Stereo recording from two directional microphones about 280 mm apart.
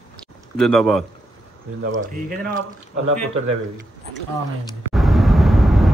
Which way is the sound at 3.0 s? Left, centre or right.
Right.